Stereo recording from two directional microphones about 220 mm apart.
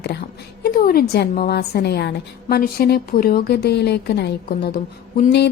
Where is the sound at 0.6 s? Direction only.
40° left (ahead or behind).